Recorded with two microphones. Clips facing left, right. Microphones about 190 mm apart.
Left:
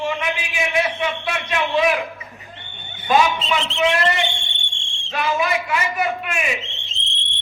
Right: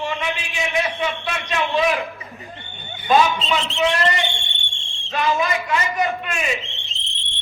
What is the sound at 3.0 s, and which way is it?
Speech, 20° left (ahead or behind).